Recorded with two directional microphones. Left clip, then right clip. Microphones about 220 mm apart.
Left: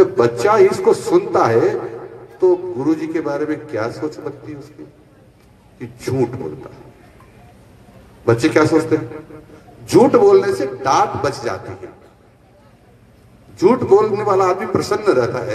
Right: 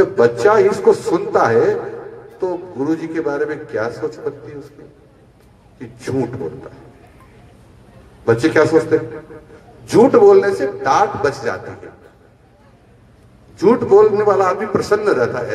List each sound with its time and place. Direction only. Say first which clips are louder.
0.0 s a man's voice: right 1 dB; 50° left (ahead or behind)
5.8 s a man's voice: left 2 dB; 50° left (ahead or behind)
8.3 s a man's voice: right 1 dB; 50° left (ahead or behind)
13.6 s a man's voice: right 2 dB; 50° left (ahead or behind)